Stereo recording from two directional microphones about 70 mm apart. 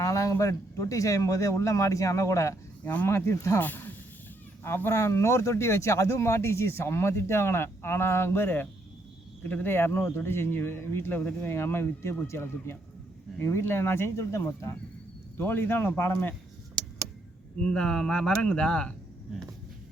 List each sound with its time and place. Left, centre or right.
0.0 s speech: left
2.8 s speech: left
3.1 s speech: left
3.6 s speech: left
15.4 s speech: left
17.6 s speech: centre